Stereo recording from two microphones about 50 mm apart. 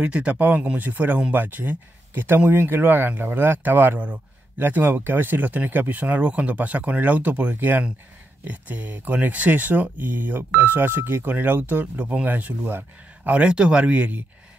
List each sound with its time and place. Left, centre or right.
0.0 s speech: right
13.3 s speech: right